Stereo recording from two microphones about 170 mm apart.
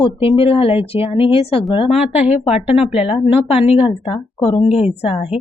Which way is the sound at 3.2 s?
35° left (ahead or behind).